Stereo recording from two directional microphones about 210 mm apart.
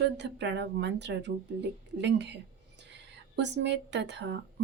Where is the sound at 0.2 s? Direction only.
55° right (ahead or behind).